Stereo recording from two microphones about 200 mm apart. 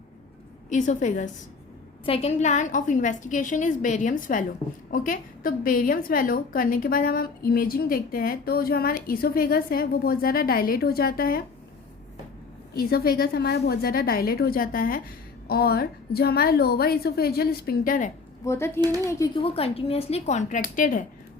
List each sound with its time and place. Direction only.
0.7 s a woman's voice: 40° left (ahead or behind)
12.7 s a woman's voice: 50° left (ahead or behind)
18.4 s speech: 15° left (ahead or behind)
19.4 s a woman's voice: 30° left (ahead or behind)